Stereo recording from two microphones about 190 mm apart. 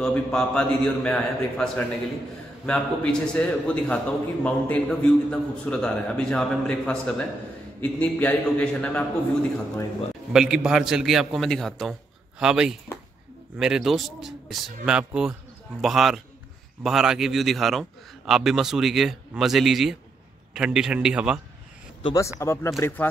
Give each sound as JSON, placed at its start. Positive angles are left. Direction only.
{"t": 0.0, "sound": "a man's voice", "side_deg": 5}
{"t": 10.3, "sound": "a man's voice", "side_deg": -5}
{"t": 22.0, "sound": "a man's voice", "side_deg": 15}